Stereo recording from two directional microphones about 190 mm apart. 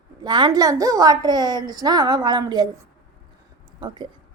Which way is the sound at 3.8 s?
25° right (ahead or behind).